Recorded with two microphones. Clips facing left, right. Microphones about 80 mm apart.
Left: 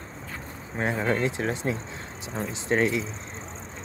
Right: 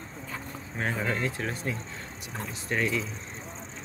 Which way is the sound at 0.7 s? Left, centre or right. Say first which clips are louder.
Left 4 dB; left.